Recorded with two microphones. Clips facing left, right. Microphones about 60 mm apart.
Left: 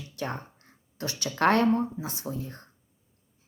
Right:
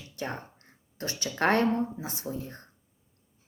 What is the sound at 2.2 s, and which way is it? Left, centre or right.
Speech, left.